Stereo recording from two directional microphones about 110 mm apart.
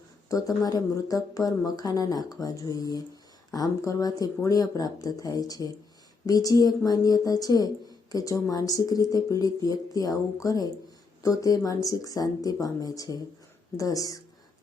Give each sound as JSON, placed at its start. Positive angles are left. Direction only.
{"t": 0.3, "sound": "speech", "side_deg": 30}